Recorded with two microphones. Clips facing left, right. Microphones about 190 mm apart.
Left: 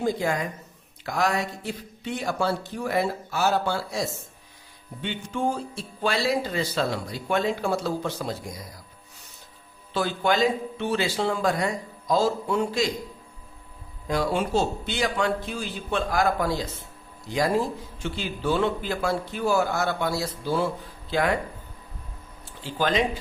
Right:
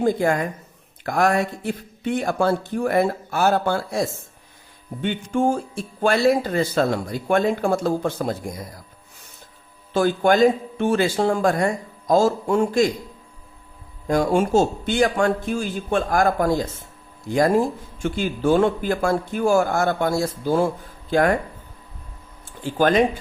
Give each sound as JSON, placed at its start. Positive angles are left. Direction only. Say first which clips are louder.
{"t": 0.0, "sound": "speech", "louder": "right 6 dB", "side_deg": -55}
{"t": 9.9, "sound": "speech", "louder": "right 6 dB", "side_deg": -50}
{"t": 14.1, "sound": "speech", "louder": "right 6 dB", "side_deg": -45}
{"t": 22.6, "sound": "speech", "louder": "right 7 dB", "side_deg": -50}